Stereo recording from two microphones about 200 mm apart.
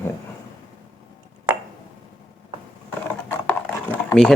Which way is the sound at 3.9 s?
5° left (ahead or behind).